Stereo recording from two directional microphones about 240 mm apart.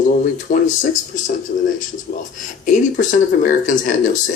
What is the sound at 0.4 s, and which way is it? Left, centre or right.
Speech, left.